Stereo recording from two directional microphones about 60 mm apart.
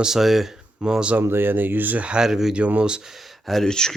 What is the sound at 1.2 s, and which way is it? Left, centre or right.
Speech, right.